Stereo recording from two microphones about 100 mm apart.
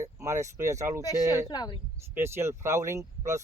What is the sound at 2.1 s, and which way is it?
Speech, 25° right (ahead or behind).